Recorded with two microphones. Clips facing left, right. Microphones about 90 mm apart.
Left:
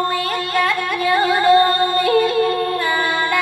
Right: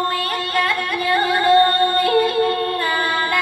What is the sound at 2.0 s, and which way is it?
Music, 30° right (ahead or behind).